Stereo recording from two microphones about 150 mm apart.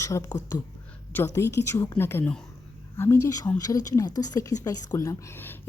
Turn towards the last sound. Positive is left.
turn(degrees=15)  # may be behind; listen again after turning